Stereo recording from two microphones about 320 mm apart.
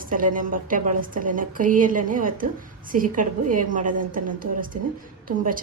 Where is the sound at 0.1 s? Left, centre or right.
Right.